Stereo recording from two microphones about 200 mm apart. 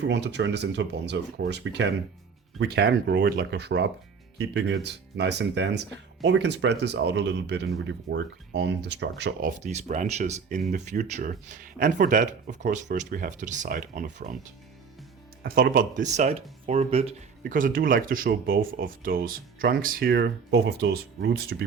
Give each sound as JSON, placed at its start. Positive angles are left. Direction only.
{"t": 0.0, "sound": "speech", "side_deg": -60}
{"t": 9.6, "sound": "speech", "side_deg": -35}
{"t": 15.4, "sound": "speech", "side_deg": -45}
{"t": 17.5, "sound": "speech", "side_deg": -45}